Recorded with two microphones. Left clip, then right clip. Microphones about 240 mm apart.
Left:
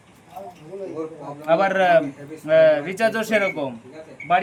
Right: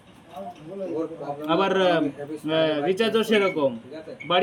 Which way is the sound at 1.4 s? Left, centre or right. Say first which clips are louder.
Left 4 dB; centre.